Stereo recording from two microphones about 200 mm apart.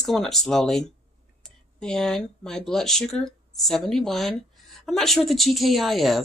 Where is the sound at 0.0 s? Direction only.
Centre (ahead or behind).